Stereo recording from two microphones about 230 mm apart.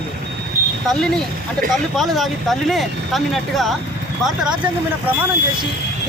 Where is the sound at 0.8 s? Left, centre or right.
Centre.